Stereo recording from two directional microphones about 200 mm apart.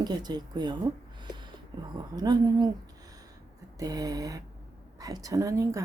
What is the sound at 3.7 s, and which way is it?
A woman's voice, 20° right (ahead or behind).